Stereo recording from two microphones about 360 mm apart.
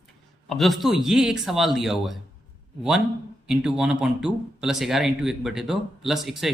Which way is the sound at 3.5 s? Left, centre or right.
Centre.